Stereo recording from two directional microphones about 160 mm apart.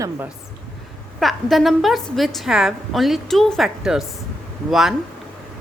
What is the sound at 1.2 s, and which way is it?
A woman's voice, centre (ahead or behind).